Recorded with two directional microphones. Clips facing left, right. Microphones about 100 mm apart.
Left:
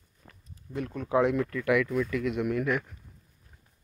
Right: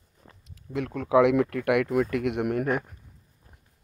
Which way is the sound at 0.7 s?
90° right.